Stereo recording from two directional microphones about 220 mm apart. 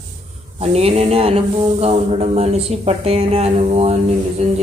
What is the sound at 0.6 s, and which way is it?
Speech, 30° right (ahead or behind).